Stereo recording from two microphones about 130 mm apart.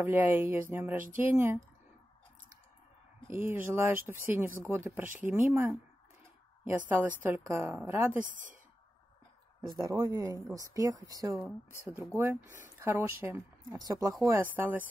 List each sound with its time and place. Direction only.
0.0 s speech: 15° right (ahead or behind)
3.3 s a woman's voice: 15° right (ahead or behind)
8.3 s speech: 90° right
9.8 s a woman's voice: 25° right (ahead or behind)
13.7 s a woman's voice: 30° right (ahead or behind)
14.2 s speech: 15° right (ahead or behind)